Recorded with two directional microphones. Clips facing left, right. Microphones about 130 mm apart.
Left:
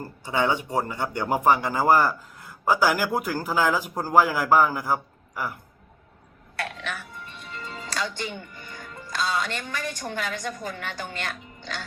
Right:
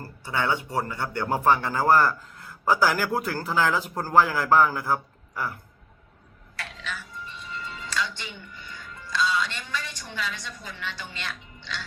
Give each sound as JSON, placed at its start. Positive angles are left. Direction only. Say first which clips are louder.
{"t": 0.0, "sound": "speech", "louder": "left 3 dB", "side_deg": 20}
{"t": 6.6, "sound": "music", "louder": "left 4 dB", "side_deg": 60}